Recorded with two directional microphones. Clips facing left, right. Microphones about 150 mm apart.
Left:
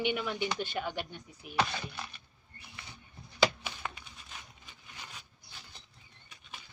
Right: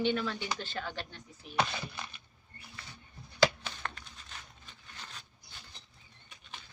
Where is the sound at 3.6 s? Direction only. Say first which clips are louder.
Left 1 dB; 10° left (ahead or behind).